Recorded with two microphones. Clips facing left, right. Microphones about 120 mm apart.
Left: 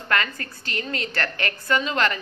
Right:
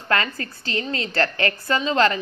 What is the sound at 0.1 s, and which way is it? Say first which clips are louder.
A woman's voice: right 2 dB; 30° right (ahead or behind).